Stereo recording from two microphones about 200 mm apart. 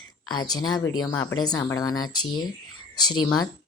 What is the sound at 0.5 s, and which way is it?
Speech, 20° left (ahead or behind).